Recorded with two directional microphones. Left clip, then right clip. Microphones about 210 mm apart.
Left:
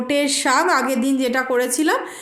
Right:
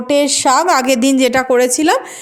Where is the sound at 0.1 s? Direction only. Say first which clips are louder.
Right 6 dB; 20° right (ahead or behind).